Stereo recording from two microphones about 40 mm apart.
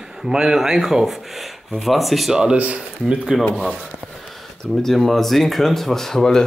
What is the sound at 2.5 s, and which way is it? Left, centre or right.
Speech, right.